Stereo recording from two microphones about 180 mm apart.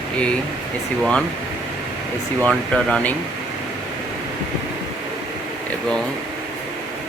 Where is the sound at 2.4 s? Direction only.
5° left (ahead or behind).